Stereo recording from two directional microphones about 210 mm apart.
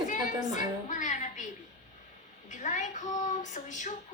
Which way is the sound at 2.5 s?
35° left (ahead or behind).